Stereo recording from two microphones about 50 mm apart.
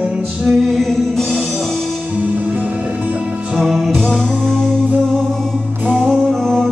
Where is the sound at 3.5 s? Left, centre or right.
Centre.